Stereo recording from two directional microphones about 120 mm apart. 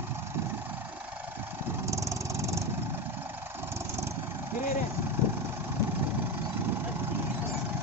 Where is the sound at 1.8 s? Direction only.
25° right (ahead or behind).